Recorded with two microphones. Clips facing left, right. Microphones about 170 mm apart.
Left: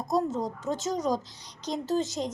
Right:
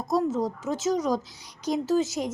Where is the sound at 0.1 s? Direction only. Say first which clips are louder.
Right 3 dB; 5° right (ahead or behind).